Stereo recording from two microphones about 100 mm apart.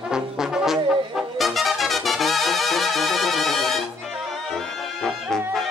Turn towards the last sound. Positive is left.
turn(degrees=0)  # may be behind; listen again after turning